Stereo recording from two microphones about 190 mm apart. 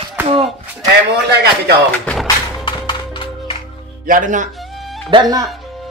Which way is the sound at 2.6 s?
25° left (ahead or behind).